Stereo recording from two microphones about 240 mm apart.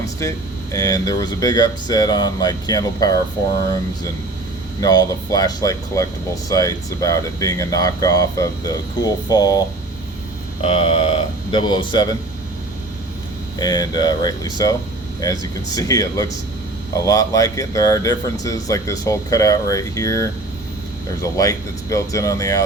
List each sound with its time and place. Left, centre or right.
0.2 s speech: centre
4.8 s speech: centre
13.6 s speech: centre
21.3 s speech: centre